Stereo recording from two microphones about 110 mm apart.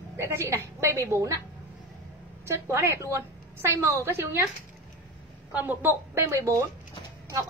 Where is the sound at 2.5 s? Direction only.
25° right (ahead or behind).